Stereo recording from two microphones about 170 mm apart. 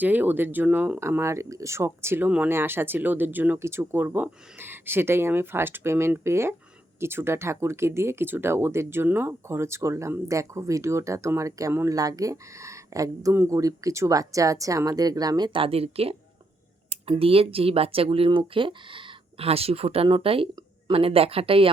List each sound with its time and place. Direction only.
0.0 s speech: 10° right (ahead or behind); by 21.7 s 35° right (ahead or behind)